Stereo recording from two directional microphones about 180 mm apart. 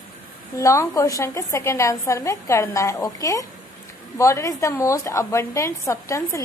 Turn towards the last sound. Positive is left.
turn(degrees=15)  # may be behind; listen again after turning